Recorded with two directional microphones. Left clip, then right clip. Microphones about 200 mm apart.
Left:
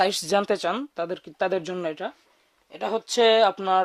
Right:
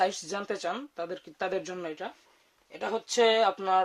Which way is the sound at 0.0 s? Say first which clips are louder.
Left 7 dB; 55° left (ahead or behind).